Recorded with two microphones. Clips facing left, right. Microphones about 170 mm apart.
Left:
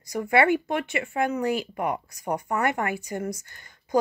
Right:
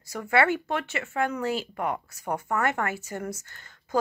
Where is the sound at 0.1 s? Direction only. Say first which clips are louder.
Left 3 dB; 15° left (ahead or behind).